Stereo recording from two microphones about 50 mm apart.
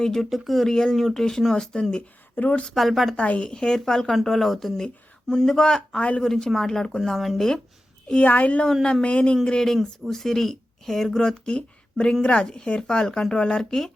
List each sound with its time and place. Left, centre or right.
0.0 s speech: centre
2.3 s speech: left
2.7 s speech: centre
3.2 s speech: left
6.0 s speech: left
6.2 s speech: centre
8.2 s speech: left; by 11.3 s centre
11.4 s speech: left